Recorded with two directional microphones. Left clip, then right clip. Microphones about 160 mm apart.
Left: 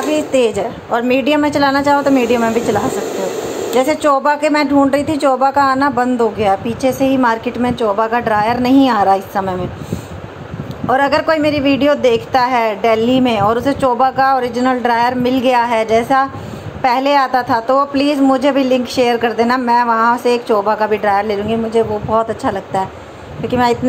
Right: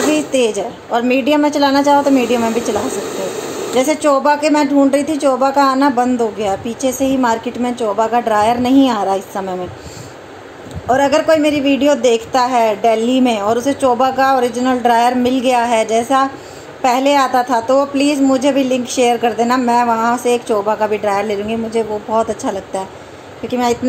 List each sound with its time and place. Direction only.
0.3 s a woman's voice: 55° left (ahead or behind)
0.6 s speech: 5° left (ahead or behind)
10.9 s speech: 5° left (ahead or behind)